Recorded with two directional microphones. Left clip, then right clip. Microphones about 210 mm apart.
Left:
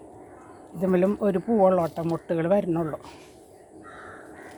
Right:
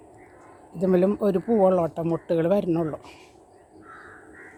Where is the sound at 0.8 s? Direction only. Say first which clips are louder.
Right 2 dB; 15° right (ahead or behind).